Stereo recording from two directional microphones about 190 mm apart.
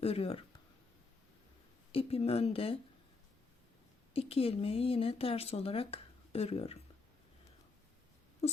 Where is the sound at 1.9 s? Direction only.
30° left (ahead or behind).